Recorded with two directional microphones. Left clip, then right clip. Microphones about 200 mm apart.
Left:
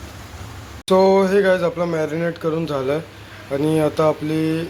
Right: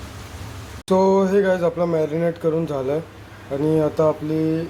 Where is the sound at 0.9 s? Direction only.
Centre (ahead or behind).